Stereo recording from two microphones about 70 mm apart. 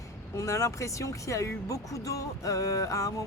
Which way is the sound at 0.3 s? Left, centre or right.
Left.